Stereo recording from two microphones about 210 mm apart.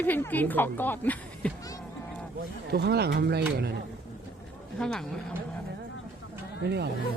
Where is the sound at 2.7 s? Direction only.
50° right (ahead or behind).